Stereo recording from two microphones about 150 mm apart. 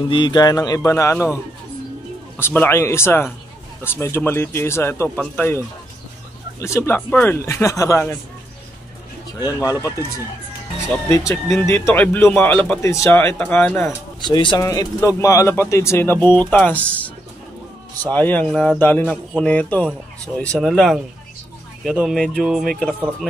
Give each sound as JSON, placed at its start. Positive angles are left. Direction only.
{"t": 0.1, "sound": "speech", "side_deg": 30}
{"t": 2.3, "sound": "speech", "side_deg": 15}
{"t": 9.6, "sound": "speech", "side_deg": 25}
{"t": 11.1, "sound": "speech", "side_deg": 20}
{"t": 14.2, "sound": "speech", "side_deg": 30}
{"t": 18.1, "sound": "speech", "side_deg": 10}